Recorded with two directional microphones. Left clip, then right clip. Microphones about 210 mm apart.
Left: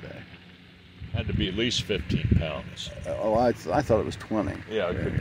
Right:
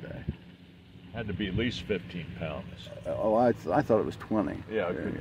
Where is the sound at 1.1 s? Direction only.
50° left (ahead or behind).